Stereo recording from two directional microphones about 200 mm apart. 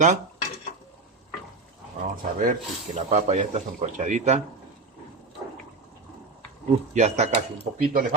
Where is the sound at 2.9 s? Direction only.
35° right (ahead or behind).